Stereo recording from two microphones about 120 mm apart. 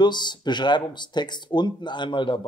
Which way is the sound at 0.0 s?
40° left (ahead or behind).